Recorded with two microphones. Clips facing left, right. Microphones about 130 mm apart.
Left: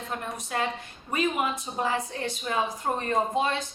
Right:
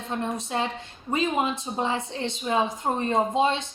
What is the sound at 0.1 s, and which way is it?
Speech, 25° right (ahead or behind).